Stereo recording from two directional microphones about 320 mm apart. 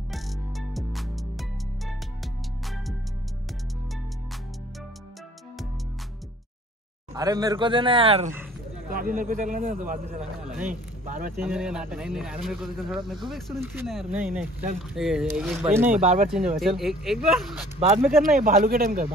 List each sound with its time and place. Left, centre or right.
0.1 s music: centre
7.2 s speech: centre
11.3 s speech: centre
15.9 s speech: right
16.3 s speech: centre
17.7 s speech: centre